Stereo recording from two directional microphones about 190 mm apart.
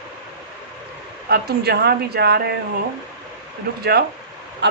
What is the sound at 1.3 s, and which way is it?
Speech, 55° right (ahead or behind).